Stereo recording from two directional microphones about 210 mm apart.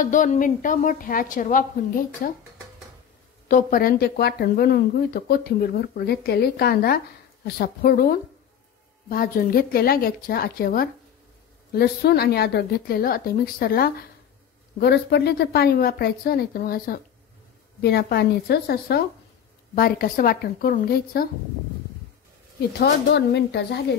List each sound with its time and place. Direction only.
0.0 s a woman's voice: 35° left (ahead or behind)
3.4 s speech: 40° left (ahead or behind)
22.7 s speech: 50° left (ahead or behind)